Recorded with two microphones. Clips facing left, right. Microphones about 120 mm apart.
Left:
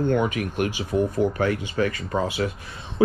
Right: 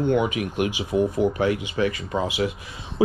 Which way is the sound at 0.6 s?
15° right (ahead or behind).